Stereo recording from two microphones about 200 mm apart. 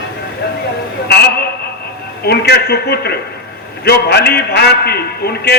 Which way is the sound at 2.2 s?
55° left (ahead or behind).